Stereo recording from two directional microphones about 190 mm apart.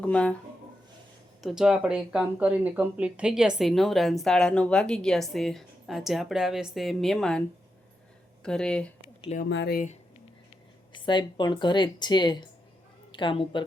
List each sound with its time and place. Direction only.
0.0 s speech: 5° left (ahead or behind)
1.4 s speech: centre (ahead or behind)
8.4 s speech: 5° left (ahead or behind)
9.5 s speech: 60° left (ahead or behind)
10.9 s a woman's voice: 25° left (ahead or behind)